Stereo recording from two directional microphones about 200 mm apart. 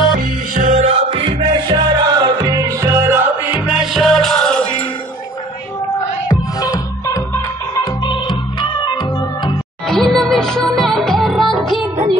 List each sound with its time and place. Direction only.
0.2 s music: 40° right (ahead or behind); by 3.2 s 15° right (ahead or behind)
3.6 s music: 5° right (ahead or behind)
6.2 s music: 15° left (ahead or behind)
9.8 s music: centre (ahead or behind)